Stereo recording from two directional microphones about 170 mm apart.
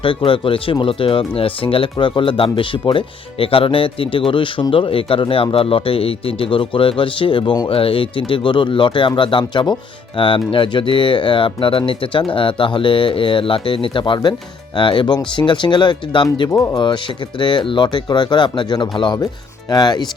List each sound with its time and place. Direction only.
0.0 s speech: 30° left (ahead or behind)